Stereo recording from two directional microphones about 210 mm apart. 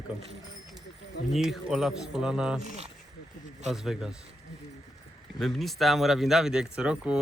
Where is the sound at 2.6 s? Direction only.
30° right (ahead or behind).